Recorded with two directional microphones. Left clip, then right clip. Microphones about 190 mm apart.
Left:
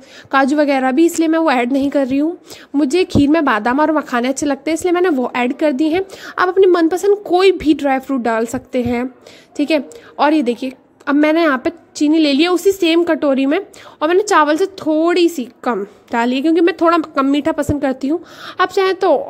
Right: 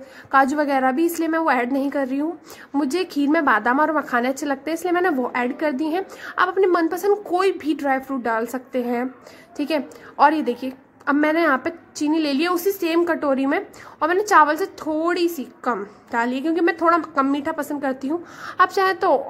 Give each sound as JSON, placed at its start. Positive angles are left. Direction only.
{"t": 0.3, "sound": "a woman's voice", "side_deg": 55}
{"t": 8.4, "sound": "a woman's voice", "side_deg": 40}
{"t": 8.7, "sound": "a woman's voice", "side_deg": 55}